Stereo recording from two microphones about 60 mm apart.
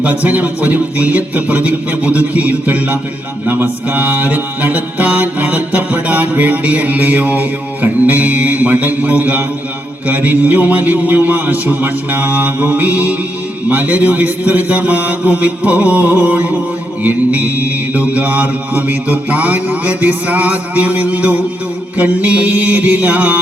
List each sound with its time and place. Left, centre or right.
0.0 s mantra: right
10.1 s a man's voice: right
13.7 s mantra: right